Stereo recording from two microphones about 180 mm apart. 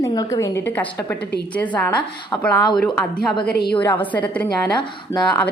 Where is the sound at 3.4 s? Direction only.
65° left (ahead or behind).